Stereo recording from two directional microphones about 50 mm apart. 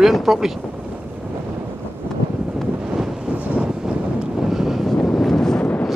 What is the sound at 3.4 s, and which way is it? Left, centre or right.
Vehicle, right.